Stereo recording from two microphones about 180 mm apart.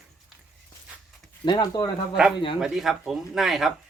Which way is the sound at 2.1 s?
5° right (ahead or behind).